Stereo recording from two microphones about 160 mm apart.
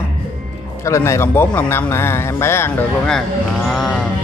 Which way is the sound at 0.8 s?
20° left (ahead or behind).